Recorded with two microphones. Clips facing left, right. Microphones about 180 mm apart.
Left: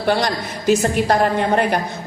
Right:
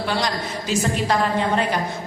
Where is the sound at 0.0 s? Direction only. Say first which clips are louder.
Left 5 dB; 55° left (ahead or behind).